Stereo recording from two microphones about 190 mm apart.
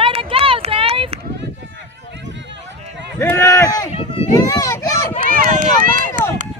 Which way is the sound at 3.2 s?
15° left (ahead or behind).